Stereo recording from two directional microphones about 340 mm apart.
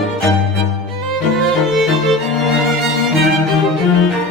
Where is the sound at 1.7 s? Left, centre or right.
Centre.